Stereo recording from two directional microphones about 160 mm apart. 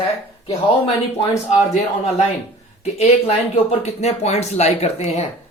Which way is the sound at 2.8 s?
40° left (ahead or behind).